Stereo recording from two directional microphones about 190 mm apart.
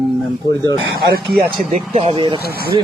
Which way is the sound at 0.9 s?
55° right (ahead or behind).